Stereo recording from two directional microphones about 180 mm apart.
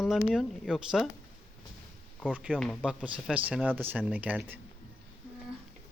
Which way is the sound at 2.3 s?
5° right (ahead or behind).